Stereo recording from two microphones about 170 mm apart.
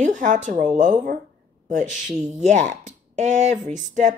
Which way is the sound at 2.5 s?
45° right (ahead or behind).